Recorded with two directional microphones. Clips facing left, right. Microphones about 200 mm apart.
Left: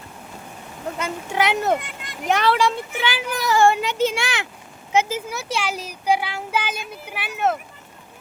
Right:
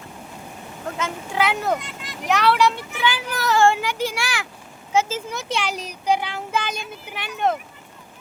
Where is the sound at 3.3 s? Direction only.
15° left (ahead or behind).